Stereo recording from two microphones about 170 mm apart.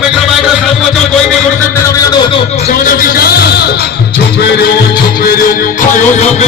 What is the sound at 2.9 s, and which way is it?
Music, 60° left (ahead or behind).